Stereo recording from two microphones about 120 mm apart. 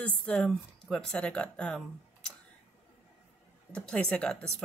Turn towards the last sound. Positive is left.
turn(degrees=5)  # may be behind; listen again after turning